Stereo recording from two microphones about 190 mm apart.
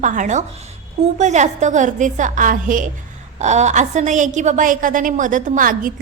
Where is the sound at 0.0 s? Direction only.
40° right (ahead or behind).